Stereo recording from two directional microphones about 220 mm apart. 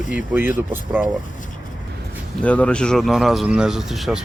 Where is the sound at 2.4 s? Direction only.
5° left (ahead or behind).